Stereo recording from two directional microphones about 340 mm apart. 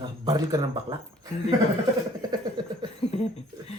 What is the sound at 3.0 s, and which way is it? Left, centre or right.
Speech, centre.